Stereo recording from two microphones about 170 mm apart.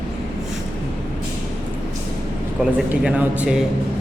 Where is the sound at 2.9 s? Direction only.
5° right (ahead or behind).